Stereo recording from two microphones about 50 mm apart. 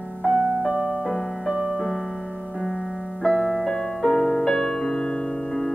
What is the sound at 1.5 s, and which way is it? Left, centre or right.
Music, centre.